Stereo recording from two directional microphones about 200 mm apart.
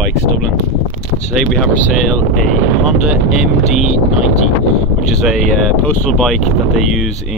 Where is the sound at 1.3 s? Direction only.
Centre (ahead or behind).